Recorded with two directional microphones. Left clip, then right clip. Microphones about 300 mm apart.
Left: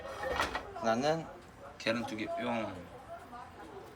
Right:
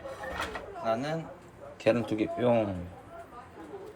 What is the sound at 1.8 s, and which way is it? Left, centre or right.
Speech, centre.